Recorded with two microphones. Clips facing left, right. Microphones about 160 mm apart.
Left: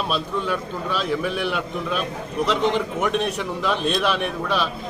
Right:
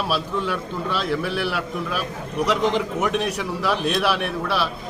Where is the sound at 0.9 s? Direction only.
10° left (ahead or behind).